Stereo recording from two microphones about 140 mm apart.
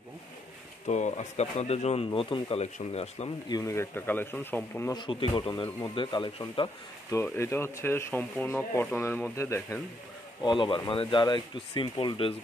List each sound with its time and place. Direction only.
0.8 s speech: 55° left (ahead or behind)
2.0 s speech: 35° left (ahead or behind)
2.6 s speech: 45° left (ahead or behind)
3.4 s speech: 25° left (ahead or behind)
4.9 s speech: 35° left (ahead or behind)
7.2 s speech: 20° left (ahead or behind)
10.4 s speech: 35° left (ahead or behind)